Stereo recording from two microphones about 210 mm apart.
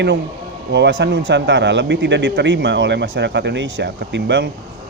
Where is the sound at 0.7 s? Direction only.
55° right (ahead or behind).